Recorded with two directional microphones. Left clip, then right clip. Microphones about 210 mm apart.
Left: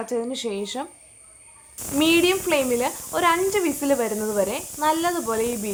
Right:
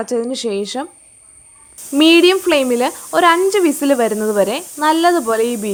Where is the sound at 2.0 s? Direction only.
40° right (ahead or behind).